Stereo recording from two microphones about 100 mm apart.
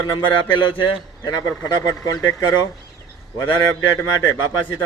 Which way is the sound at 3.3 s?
30° left (ahead or behind).